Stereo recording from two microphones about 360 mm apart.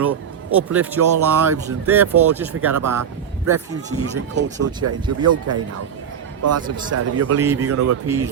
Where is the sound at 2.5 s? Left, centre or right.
Right.